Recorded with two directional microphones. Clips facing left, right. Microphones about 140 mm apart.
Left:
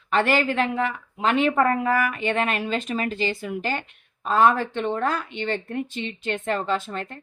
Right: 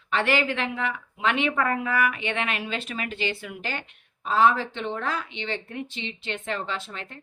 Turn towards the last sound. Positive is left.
turn(degrees=45)  # may be behind; listen again after turning